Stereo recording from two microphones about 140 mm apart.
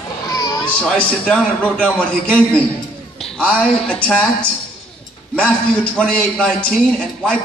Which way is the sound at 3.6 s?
5° left (ahead or behind).